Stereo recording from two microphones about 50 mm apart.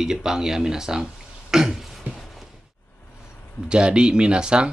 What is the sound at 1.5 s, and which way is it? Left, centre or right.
Throat clearing, centre.